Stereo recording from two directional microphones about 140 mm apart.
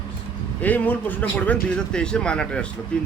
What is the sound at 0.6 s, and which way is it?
Speech, 10° left (ahead or behind).